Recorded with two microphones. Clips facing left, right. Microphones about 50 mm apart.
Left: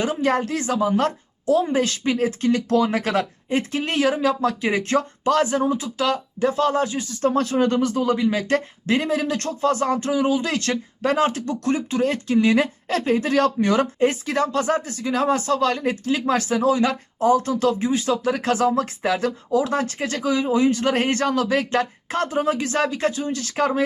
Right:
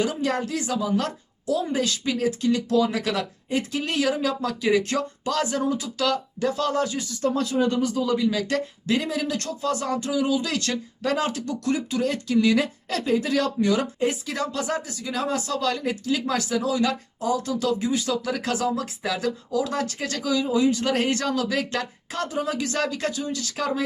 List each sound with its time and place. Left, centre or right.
0.0 s a woman's voice: left